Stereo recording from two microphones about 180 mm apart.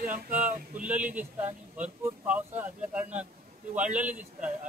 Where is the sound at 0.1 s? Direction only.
10° right (ahead or behind).